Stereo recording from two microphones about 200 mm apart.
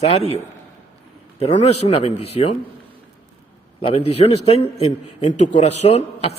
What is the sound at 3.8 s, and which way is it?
A man's voice, 30° left (ahead or behind).